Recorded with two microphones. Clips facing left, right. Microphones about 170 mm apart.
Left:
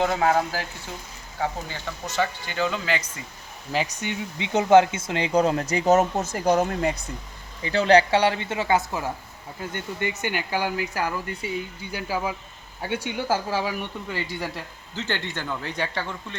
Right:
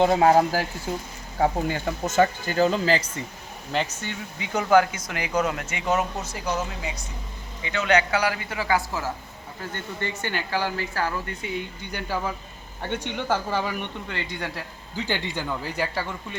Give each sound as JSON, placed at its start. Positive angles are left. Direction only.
{"t": 0.0, "sound": "speech", "side_deg": -30}
{"t": 1.6, "sound": "speech", "side_deg": -50}
{"t": 4.0, "sound": "speech", "side_deg": 25}
{"t": 7.6, "sound": "speech", "side_deg": 35}
{"t": 14.9, "sound": "speech", "side_deg": -10}